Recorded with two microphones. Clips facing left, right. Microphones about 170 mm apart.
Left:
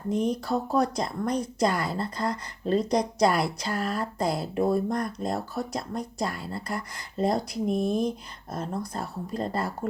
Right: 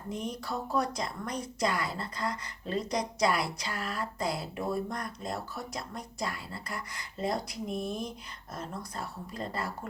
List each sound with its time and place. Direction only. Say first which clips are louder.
0.1 s speech: left 10 dB; 35° left (ahead or behind)